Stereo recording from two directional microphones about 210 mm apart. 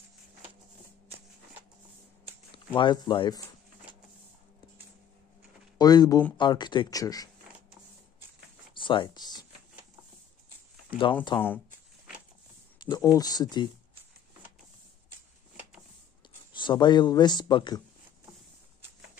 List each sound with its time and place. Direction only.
2.5 s speech: 25° left (ahead or behind)
5.8 s speech: 20° left (ahead or behind)
8.7 s a sound: 25° left (ahead or behind)
11.3 s speech: 20° left (ahead or behind)
12.8 s speech: 20° left (ahead or behind)
16.5 s speech: 20° left (ahead or behind)